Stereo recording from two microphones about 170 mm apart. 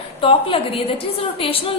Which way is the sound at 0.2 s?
30° left (ahead or behind).